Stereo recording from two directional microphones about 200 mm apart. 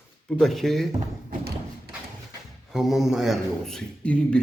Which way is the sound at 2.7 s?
Centre (ahead or behind).